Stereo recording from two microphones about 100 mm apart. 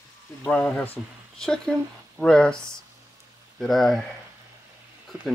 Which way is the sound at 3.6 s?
Centre (ahead or behind).